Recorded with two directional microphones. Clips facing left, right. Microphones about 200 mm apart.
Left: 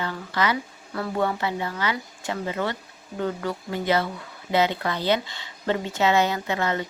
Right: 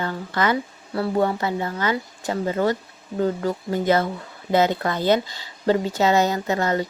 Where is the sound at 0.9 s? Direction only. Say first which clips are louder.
Right 4 dB; 30° right (ahead or behind).